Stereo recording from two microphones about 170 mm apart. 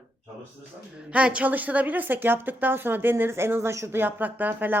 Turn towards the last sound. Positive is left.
turn(degrees=-10)  # may be behind; listen again after turning